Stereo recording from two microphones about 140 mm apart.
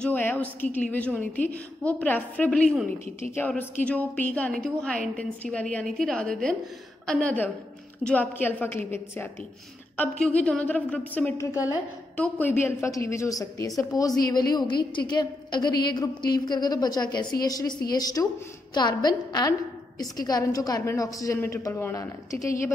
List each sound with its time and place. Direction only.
0.0 s a woman's voice: 10° left (ahead or behind)
10.2 s a woman's voice: 5° left (ahead or behind); by 22.7 s 20° left (ahead or behind)